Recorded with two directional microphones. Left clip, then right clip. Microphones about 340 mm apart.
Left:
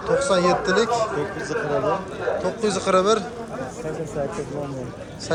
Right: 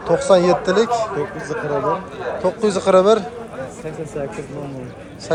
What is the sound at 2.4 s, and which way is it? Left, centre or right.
Speech, centre.